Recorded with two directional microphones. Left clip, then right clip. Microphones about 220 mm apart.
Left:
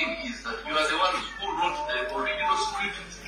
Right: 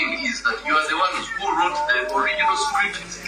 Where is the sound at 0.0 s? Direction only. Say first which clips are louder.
Right 8 dB; 30° right (ahead or behind).